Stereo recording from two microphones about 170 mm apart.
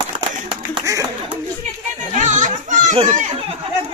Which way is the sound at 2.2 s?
45° right (ahead or behind).